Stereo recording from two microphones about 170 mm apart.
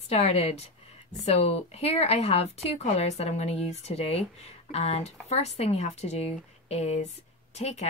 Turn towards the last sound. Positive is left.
turn(degrees=40)  # may be behind; listen again after turning